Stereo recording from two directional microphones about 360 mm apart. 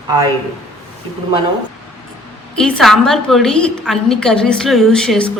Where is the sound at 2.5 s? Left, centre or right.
Centre.